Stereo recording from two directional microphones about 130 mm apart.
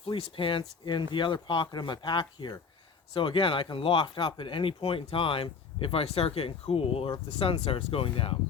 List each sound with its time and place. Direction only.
0.0 s speech: 45° left (ahead or behind)